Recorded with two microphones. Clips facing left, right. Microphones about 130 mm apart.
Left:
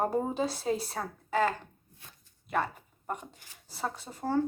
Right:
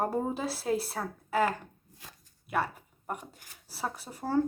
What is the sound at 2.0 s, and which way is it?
Speech, 90° right.